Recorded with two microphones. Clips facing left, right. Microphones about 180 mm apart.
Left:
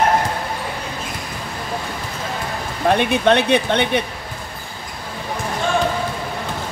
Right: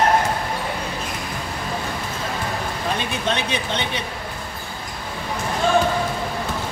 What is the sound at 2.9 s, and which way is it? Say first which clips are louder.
Speech: left 10 dB; 65° left (ahead or behind).